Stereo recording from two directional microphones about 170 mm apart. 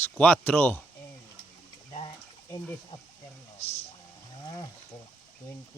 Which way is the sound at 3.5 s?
35° left (ahead or behind).